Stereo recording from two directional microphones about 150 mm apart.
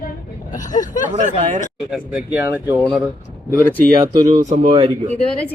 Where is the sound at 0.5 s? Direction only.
60° left (ahead or behind).